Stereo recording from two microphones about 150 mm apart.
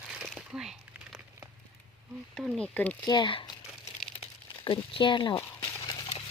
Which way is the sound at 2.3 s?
Centre (ahead or behind).